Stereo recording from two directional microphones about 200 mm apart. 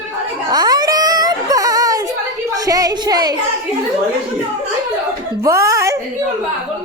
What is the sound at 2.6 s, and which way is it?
Speech, 20° right (ahead or behind).